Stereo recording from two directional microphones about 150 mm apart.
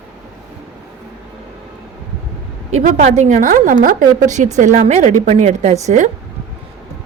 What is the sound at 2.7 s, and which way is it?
A woman's voice, 50° right (ahead or behind).